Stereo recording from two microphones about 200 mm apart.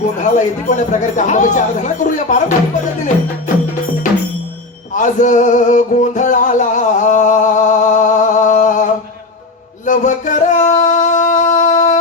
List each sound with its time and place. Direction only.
0.2 s speech: 40° left (ahead or behind)
4.9 s music: 40° left (ahead or behind)
9.8 s singing: 40° left (ahead or behind)